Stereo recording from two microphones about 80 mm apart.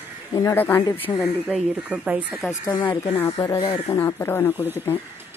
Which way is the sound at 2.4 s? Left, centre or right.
Centre.